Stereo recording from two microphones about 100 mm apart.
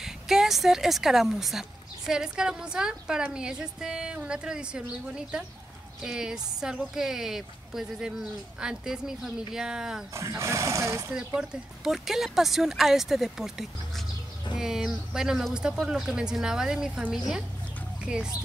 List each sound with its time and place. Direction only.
0.0 s a woman's voice: 5° right (ahead or behind)
10.1 s speech: 30° right (ahead or behind)
11.1 s a woman's voice: 5° right (ahead or behind)
18.0 s speech: 10° right (ahead or behind)